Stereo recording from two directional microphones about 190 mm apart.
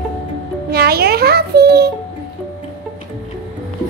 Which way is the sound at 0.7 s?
55° right (ahead or behind).